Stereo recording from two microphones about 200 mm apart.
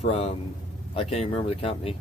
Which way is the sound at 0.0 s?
35° left (ahead or behind).